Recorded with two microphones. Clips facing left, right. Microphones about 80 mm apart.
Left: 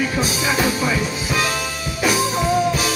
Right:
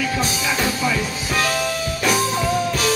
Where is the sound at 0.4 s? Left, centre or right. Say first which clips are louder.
Left 2 dB; centre.